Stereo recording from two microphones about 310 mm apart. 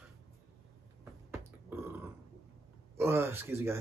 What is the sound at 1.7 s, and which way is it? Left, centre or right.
Burping, centre.